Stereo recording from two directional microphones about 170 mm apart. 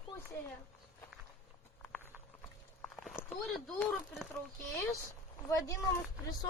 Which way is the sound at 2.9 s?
5° left (ahead or behind).